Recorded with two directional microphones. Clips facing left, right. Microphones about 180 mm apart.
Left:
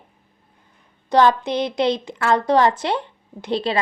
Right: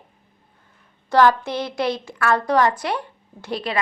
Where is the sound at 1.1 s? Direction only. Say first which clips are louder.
Left 1 dB; 20° left (ahead or behind).